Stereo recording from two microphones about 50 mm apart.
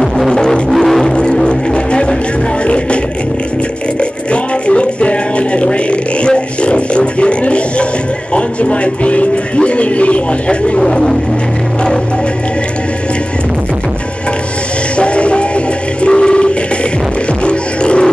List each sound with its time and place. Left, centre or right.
0.3 s music: centre
0.7 s music: centre
1.1 s music: centre
4.0 s music: left
10.8 s vehicle: centre
15.0 s music: left
16.0 s a sound: centre
17.5 s music: left